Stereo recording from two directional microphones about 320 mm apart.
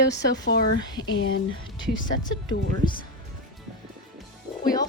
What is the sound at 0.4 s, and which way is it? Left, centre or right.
Speech, left.